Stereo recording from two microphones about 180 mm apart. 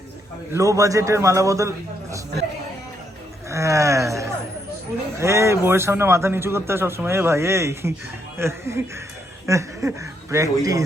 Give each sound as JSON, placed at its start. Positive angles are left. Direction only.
{"t": 0.5, "sound": "a man's voice", "side_deg": -15}
{"t": 3.5, "sound": "a sound", "side_deg": -15}
{"t": 5.1, "sound": "a man's voice", "side_deg": -15}